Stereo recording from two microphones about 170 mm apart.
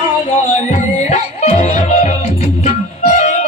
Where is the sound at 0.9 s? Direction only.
40° left (ahead or behind).